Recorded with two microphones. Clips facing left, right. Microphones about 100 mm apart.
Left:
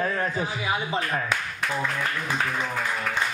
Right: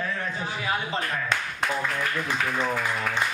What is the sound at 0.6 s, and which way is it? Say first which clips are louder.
Speech: right 1 dB; 15° left (ahead or behind).